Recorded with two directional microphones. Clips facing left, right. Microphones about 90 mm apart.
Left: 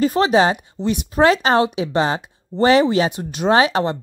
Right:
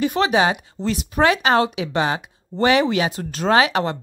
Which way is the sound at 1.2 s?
30° left (ahead or behind).